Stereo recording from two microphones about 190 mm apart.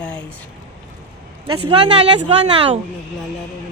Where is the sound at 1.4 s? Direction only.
25° right (ahead or behind).